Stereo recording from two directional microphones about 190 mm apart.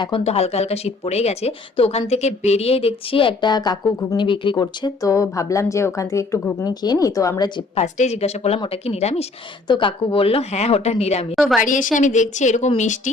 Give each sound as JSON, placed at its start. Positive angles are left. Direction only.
{"t": 0.0, "sound": "speech", "side_deg": 30}
{"t": 7.8, "sound": "a woman's voice", "side_deg": 35}
{"t": 11.3, "sound": "a woman's voice", "side_deg": 0}
{"t": 11.6, "sound": "a woman's voice", "side_deg": 45}